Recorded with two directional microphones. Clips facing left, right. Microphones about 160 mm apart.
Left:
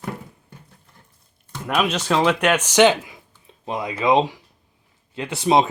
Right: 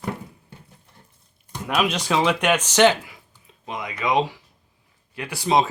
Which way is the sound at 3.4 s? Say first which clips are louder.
Left 5 dB; 30° left (ahead or behind).